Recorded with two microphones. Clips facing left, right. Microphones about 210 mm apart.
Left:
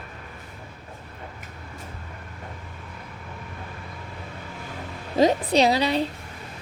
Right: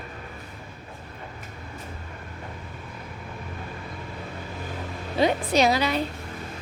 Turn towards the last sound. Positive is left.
turn(degrees=30)  # may be behind; listen again after turning